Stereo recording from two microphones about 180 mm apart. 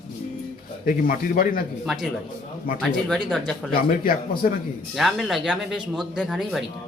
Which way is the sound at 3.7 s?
55° left (ahead or behind).